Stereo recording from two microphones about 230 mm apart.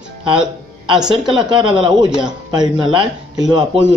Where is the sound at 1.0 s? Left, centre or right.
Centre.